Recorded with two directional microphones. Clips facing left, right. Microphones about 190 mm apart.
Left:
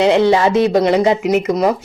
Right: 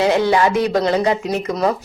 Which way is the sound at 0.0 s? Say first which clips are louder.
Left 3 dB; 25° left (ahead or behind).